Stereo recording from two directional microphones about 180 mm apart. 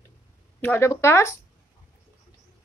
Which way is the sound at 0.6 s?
15° left (ahead or behind).